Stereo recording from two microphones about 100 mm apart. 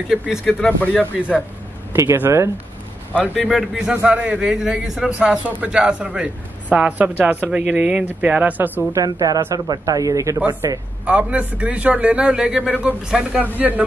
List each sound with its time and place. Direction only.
0.5 s speech: 10° left (ahead or behind)
2.0 s speech: 25° right (ahead or behind)
3.2 s speech: 15° left (ahead or behind)
3.5 s a man's voice: 5° right (ahead or behind)
8.9 s speech: 35° right (ahead or behind)
11.1 s a man's voice: 15° right (ahead or behind)